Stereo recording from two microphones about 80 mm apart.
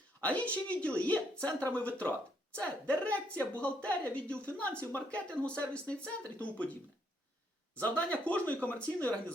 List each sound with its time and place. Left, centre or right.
0.2 s a woman's voice: centre
7.8 s speech: centre